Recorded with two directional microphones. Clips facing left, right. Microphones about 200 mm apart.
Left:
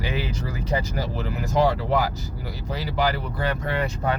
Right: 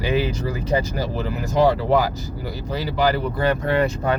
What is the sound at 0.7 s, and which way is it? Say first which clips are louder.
Speech: right 4 dB; 30° right (ahead or behind).